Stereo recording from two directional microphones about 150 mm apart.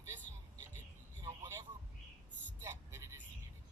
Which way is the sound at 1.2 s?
20° right (ahead or behind).